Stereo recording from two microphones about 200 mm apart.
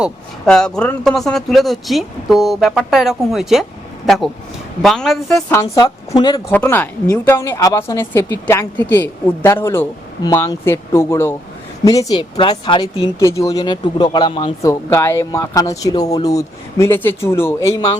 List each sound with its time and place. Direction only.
0.0 s a man's voice: 5° left (ahead or behind)
5.7 s a woman's voice: 20° left (ahead or behind)
6.5 s speech: 10° left (ahead or behind)